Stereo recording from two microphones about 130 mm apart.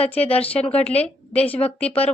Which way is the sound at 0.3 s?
50° left (ahead or behind).